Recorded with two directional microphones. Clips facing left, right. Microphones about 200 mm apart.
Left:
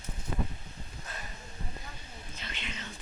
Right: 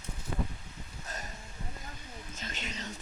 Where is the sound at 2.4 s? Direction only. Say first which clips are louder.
Right 2 dB; 45° right (ahead or behind).